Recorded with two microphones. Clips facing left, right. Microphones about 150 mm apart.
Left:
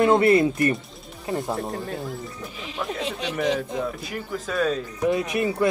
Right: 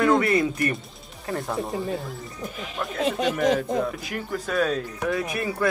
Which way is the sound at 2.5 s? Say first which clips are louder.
Right 1 dB; 50° right (ahead or behind).